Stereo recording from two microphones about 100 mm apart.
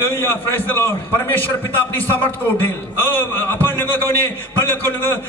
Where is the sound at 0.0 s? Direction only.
25° left (ahead or behind).